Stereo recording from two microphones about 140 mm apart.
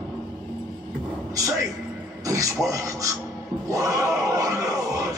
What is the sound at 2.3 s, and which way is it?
Speech, 25° right (ahead or behind).